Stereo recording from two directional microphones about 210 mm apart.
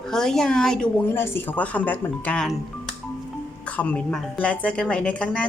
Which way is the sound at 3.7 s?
5° left (ahead or behind).